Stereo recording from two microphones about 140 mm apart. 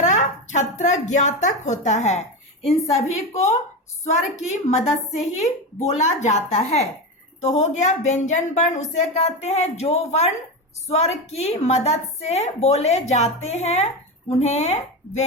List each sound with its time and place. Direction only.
0.0 s a woman's voice: 60° left (ahead or behind)